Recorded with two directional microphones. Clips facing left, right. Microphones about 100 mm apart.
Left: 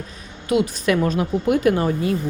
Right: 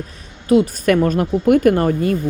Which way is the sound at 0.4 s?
40° right (ahead or behind).